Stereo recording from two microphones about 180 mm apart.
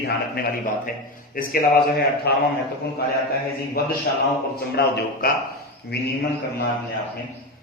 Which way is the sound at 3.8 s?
60° left (ahead or behind).